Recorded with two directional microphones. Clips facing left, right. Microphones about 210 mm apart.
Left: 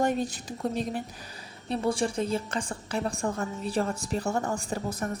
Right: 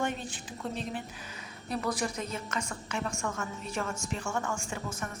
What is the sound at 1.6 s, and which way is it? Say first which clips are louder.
A woman's voice: left 5 dB; 30° left (ahead or behind).